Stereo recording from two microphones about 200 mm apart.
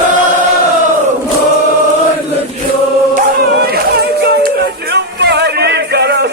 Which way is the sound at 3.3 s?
50° right (ahead or behind).